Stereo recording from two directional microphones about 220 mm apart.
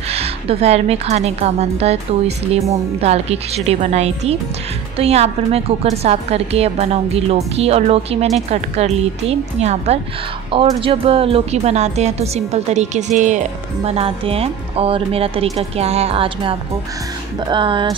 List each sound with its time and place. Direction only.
0.1 s speech: 30° right (ahead or behind)